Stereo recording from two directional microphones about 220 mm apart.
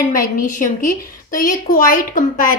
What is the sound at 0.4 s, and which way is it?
A woman's voice, 35° left (ahead or behind).